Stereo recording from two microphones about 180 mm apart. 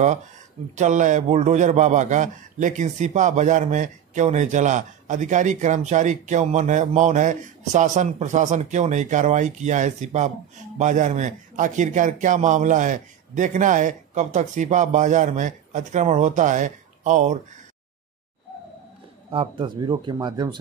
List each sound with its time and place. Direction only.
0.7 s a man's voice: 45° right (ahead or behind)
19.3 s speech: 25° right (ahead or behind)